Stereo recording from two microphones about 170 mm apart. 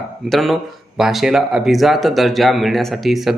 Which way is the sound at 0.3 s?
Centre (ahead or behind).